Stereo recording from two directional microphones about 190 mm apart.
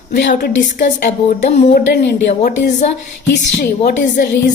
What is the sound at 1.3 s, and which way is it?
Speech, 35° left (ahead or behind).